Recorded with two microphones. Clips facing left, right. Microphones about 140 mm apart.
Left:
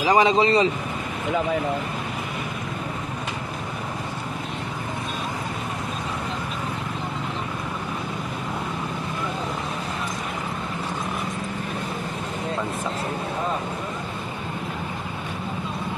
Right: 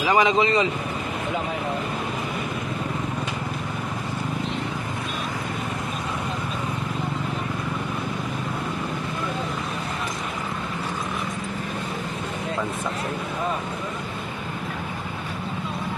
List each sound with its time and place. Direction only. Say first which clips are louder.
0.0 s speech: left 1 dB; 35° left (ahead or behind)